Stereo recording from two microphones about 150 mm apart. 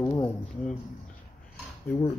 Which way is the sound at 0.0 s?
20° left (ahead or behind).